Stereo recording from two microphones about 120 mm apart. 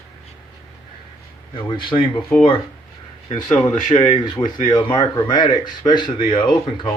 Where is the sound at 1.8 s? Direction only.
45° left (ahead or behind).